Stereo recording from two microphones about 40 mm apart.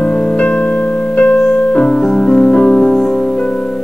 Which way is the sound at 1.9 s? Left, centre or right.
Centre.